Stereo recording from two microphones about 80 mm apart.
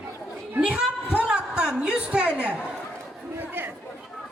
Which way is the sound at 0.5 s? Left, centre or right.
Centre.